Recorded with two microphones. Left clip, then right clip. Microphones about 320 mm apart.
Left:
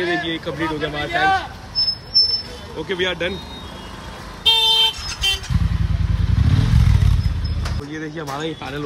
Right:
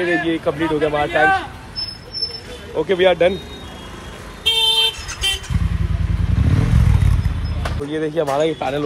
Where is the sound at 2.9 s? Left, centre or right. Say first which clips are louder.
Right 8 dB; centre.